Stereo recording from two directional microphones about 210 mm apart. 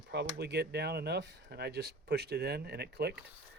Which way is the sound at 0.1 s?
50° right (ahead or behind).